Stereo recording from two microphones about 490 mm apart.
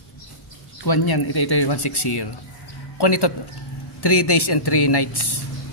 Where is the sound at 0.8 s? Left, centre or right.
Left.